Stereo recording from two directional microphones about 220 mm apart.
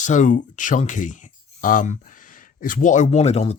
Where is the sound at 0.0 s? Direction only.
35° left (ahead or behind).